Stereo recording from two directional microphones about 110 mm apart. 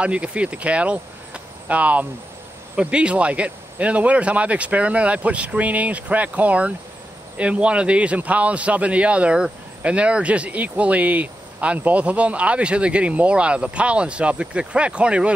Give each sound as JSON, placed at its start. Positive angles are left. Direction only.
{"t": 0.0, "sound": "a man's voice", "side_deg": -10}